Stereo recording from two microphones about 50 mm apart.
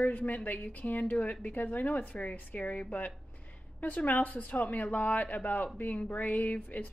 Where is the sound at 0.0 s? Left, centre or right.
Left.